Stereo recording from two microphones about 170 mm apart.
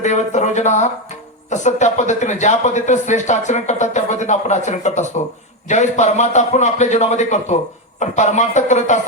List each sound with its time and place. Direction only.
0.0 s speech: 45° left (ahead or behind)